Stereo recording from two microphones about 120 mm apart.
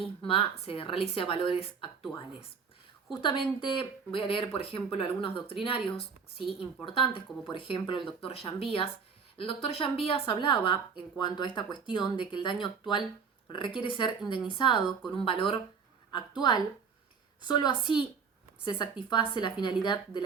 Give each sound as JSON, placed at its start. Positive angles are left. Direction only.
{"t": 0.0, "sound": "a woman's voice", "side_deg": 50}
{"t": 16.4, "sound": "a woman's voice", "side_deg": 40}